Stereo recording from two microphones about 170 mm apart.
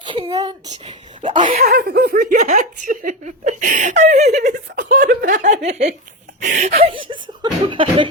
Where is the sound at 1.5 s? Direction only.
65° right (ahead or behind).